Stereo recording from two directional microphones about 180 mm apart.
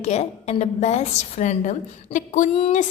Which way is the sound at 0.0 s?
40° left (ahead or behind).